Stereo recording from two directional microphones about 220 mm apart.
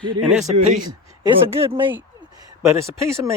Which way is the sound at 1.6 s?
20° right (ahead or behind).